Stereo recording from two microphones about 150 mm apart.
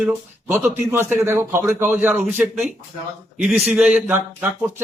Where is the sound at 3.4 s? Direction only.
Centre (ahead or behind).